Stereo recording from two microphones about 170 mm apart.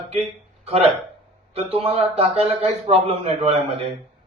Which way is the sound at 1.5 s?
35° right (ahead or behind).